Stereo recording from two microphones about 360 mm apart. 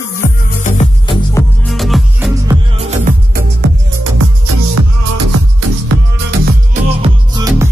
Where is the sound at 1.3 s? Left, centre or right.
Centre.